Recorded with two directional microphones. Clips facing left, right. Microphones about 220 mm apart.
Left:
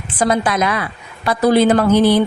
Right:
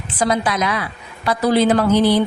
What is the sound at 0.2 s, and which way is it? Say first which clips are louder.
A woman's voice: left 3 dB; 50° left (ahead or behind).